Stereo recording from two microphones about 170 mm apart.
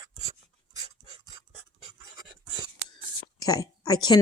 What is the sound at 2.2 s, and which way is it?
Writing, 25° right (ahead or behind).